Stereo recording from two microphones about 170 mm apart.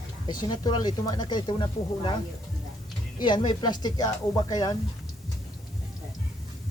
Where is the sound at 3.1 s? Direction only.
25° left (ahead or behind).